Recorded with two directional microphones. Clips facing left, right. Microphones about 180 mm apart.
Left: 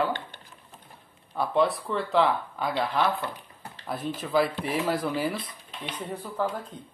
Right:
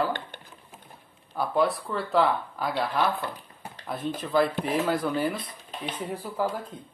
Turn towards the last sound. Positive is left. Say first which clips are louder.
# right 1 dB
turn(degrees=-5)  # may be behind; listen again after turning